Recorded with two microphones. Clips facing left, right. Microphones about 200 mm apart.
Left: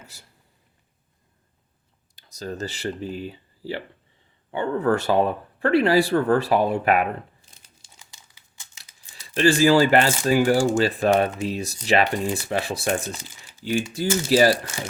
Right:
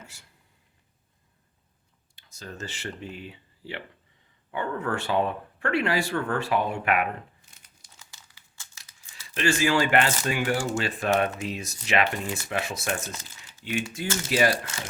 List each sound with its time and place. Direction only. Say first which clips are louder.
0.1 s speech: left 4 dB; 35° left (ahead or behind)
2.1 s speech: left 8 dB; 40° left (ahead or behind)
7.9 s crumpling: even; 15° left (ahead or behind)
9.3 s speech: left 7 dB; 35° left (ahead or behind)